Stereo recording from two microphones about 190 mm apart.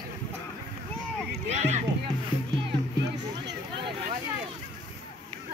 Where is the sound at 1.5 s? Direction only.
35° right (ahead or behind).